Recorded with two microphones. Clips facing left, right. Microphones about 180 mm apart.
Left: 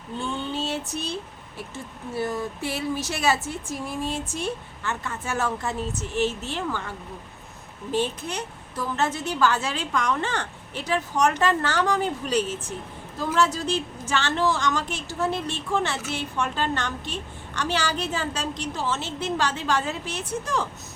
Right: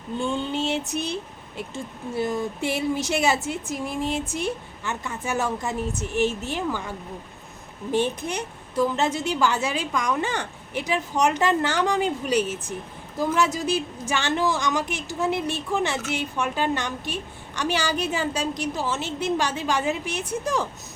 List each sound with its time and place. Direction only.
0.6 s a woman's voice: 20° right (ahead or behind)
7.9 s a woman's voice: 15° right (ahead or behind)